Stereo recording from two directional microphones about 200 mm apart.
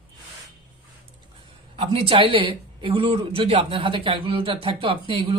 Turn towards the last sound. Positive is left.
turn(degrees=-25)  # may be behind; listen again after turning